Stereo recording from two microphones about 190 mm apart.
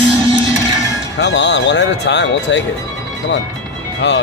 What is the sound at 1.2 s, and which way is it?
Speech, 65° left (ahead or behind).